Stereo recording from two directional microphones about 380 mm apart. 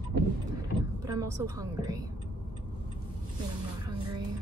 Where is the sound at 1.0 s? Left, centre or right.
Centre.